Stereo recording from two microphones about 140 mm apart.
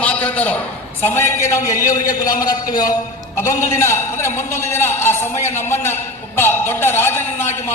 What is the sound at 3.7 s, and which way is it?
A man's voice, 20° left (ahead or behind).